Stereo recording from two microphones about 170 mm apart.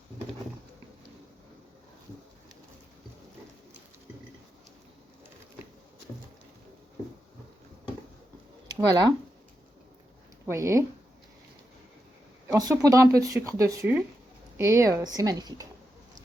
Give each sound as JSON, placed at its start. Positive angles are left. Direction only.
{"t": 8.6, "sound": "speech", "side_deg": -25}
{"t": 10.4, "sound": "speech", "side_deg": -15}
{"t": 12.5, "sound": "speech", "side_deg": -20}